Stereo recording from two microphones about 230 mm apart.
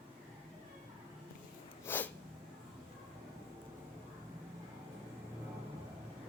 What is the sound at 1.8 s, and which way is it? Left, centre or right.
Snort, centre.